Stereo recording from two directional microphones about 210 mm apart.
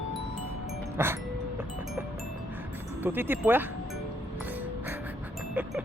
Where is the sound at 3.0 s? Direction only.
10° right (ahead or behind).